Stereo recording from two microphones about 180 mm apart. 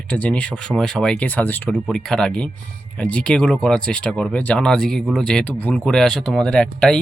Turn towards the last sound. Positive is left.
turn(degrees=5)  # may be behind; listen again after turning